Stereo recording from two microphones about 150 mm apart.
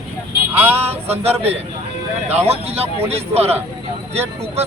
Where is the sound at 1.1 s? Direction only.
40° right (ahead or behind).